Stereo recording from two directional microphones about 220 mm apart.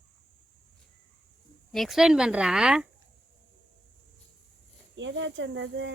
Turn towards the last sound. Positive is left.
turn(degrees=-55)  # may be behind; listen again after turning